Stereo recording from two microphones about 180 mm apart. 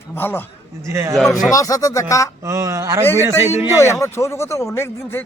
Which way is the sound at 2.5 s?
15° right (ahead or behind).